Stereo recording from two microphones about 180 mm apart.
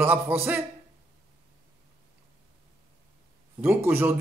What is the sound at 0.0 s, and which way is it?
Speech, 10° right (ahead or behind).